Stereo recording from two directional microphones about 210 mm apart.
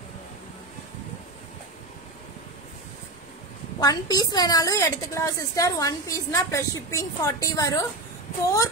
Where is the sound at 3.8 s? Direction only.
15° left (ahead or behind).